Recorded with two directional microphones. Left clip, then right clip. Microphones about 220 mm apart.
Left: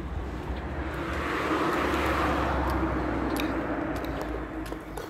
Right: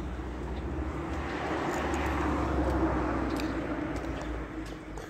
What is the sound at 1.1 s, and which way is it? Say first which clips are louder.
Vehicle: left 6 dB; 50° left (ahead or behind).